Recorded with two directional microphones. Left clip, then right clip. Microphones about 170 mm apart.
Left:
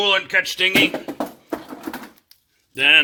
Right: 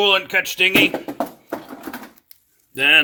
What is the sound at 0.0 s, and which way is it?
Speech, 40° right (ahead or behind).